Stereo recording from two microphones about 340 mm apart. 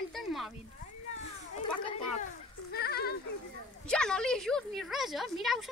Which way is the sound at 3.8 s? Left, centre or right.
Centre.